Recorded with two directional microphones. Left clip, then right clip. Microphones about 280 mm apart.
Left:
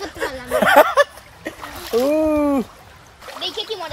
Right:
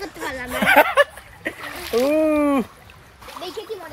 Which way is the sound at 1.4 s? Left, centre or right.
Centre.